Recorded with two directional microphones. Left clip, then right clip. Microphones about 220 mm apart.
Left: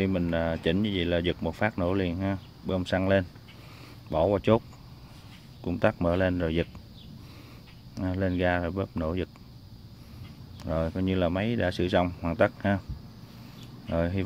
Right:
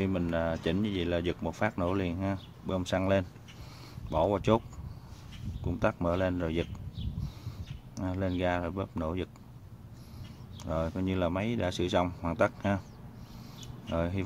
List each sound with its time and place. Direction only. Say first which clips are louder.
0.0 s speech: left 3 dB; 15° left (ahead or behind)
5.7 s speech: left 4 dB; 20° left (ahead or behind)
7.9 s speech: left 4 dB; 15° left (ahead or behind)
10.6 s speech: left 3 dB; 15° left (ahead or behind)
13.8 s speech: left 4 dB; 15° left (ahead or behind)